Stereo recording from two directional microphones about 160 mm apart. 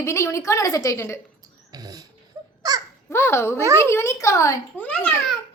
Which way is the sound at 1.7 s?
25° right (ahead or behind).